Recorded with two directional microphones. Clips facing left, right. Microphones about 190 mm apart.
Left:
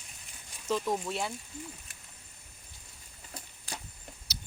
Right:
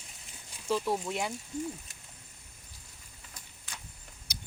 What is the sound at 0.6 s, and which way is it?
Speech, 10° right (ahead or behind).